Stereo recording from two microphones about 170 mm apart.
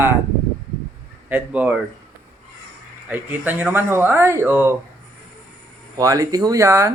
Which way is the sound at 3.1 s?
10° right (ahead or behind).